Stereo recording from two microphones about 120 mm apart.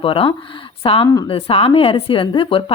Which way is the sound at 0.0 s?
50° left (ahead or behind).